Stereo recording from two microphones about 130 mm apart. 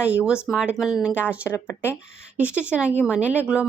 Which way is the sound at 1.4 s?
20° left (ahead or behind).